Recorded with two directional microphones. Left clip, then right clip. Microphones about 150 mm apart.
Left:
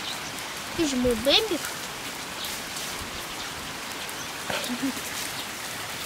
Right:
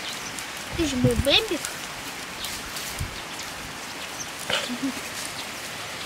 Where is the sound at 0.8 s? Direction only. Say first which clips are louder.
Even; 5° left (ahead or behind).